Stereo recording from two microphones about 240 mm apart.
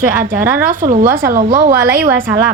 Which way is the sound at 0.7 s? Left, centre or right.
Right.